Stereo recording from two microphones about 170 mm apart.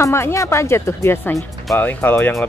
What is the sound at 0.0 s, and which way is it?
Speech, 15° left (ahead or behind).